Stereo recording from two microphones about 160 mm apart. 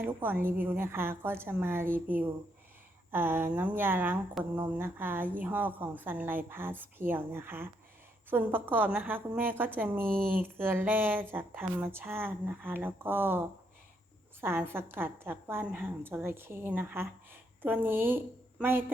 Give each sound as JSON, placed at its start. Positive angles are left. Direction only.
{"t": 0.0, "sound": "a woman's voice", "side_deg": -10}
{"t": 10.1, "sound": "speech", "side_deg": -65}
{"t": 10.4, "sound": "a woman's voice", "side_deg": -15}
{"t": 14.4, "sound": "a woman's voice", "side_deg": -15}